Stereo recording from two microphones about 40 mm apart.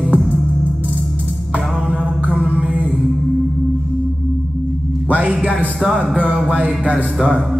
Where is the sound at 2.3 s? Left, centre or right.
Right.